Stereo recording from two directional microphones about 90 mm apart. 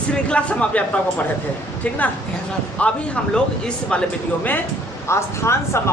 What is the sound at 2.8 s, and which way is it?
Speech, 10° left (ahead or behind).